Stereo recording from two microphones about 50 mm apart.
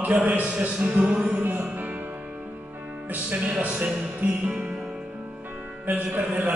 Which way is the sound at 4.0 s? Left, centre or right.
Right.